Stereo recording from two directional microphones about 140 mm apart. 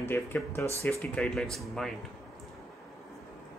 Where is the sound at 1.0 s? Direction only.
10° left (ahead or behind).